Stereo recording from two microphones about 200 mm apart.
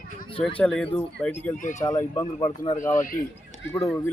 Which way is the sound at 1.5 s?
40° left (ahead or behind).